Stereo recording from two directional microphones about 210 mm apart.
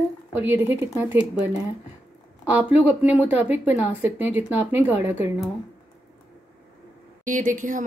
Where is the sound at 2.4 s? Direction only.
5° right (ahead or behind).